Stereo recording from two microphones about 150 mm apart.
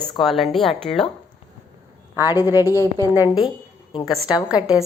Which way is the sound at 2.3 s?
20° left (ahead or behind).